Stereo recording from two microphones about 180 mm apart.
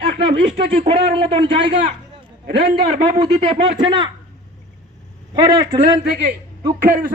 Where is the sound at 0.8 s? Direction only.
35° right (ahead or behind).